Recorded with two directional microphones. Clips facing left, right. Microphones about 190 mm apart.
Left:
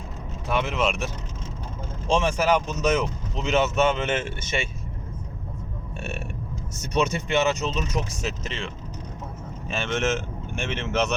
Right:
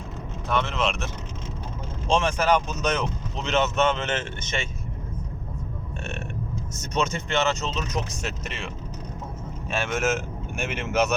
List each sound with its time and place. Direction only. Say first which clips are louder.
0.4 s speech: left 1 dB; 10° left (ahead or behind)
6.0 s burping: left 2 dB; 10° left (ahead or behind)
6.9 s speech: left 2 dB; 15° left (ahead or behind)
8.2 s speech: left 2 dB; 5° right (ahead or behind)